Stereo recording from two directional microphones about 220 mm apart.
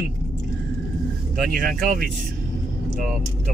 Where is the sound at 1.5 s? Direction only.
40° right (ahead or behind).